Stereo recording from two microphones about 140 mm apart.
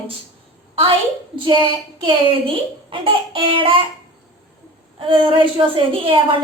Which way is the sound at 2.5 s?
40° right (ahead or behind).